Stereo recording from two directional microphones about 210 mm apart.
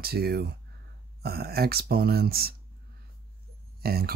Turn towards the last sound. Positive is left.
turn(degrees=-45)  # may be behind; listen again after turning